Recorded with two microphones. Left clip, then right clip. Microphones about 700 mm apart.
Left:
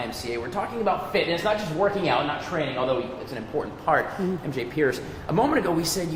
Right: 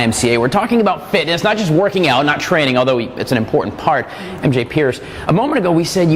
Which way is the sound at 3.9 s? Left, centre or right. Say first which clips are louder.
Right 2 dB; right.